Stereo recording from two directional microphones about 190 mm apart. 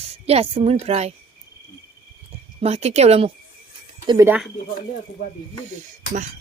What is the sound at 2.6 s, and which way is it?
A woman's voice, 35° right (ahead or behind).